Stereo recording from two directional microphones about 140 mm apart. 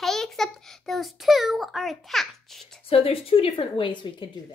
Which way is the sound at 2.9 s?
45° left (ahead or behind).